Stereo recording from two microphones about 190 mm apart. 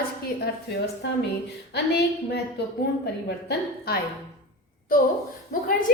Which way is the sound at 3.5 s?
55° left (ahead or behind).